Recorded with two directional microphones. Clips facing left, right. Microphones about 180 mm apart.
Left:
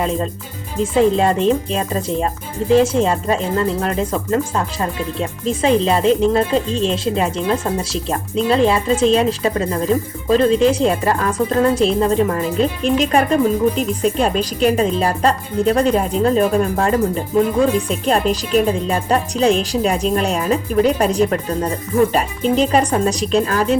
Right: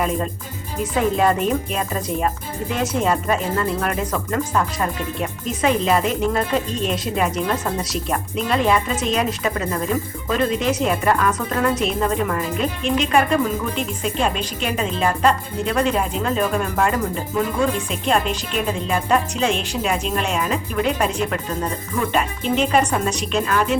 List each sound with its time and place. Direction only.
0.0 s speech: 30° left (ahead or behind)